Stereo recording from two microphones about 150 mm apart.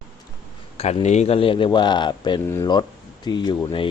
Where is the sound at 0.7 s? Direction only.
45° left (ahead or behind).